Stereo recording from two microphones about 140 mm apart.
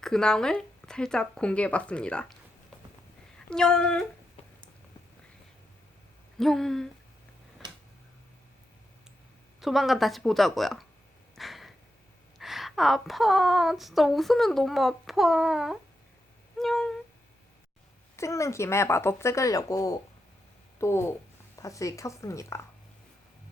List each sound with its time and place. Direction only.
0.0 s speech: 5° left (ahead or behind)
3.3 s speech: 5° left (ahead or behind)
6.4 s speech: 5° left (ahead or behind)
9.6 s speech: centre (ahead or behind)
11.3 s a sound: centre (ahead or behind)
12.4 s speech: centre (ahead or behind)
16.6 s a sound: centre (ahead or behind)
18.2 s speech: 20° left (ahead or behind)